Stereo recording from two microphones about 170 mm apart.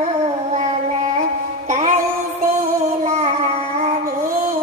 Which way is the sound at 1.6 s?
40° right (ahead or behind).